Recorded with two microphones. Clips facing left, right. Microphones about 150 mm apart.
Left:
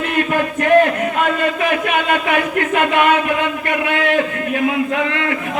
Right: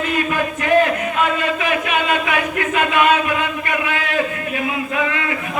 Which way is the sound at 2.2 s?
55° left (ahead or behind).